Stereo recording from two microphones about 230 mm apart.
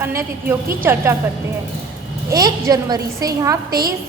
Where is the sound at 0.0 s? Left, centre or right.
Centre.